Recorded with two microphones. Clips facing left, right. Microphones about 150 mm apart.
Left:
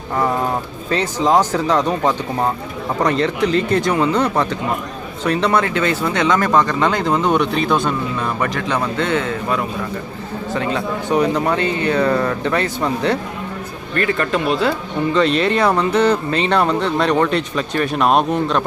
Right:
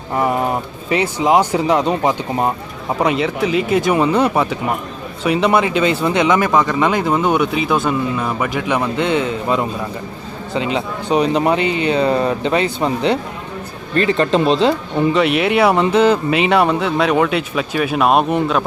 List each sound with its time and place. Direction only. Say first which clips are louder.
0.2 s speech: right 1 dB; 15° right (ahead or behind)
15.1 s speech: left 1 dB; 10° right (ahead or behind)